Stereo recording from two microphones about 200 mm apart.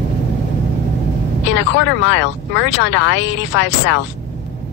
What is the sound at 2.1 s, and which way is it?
Speech, 65° left (ahead or behind).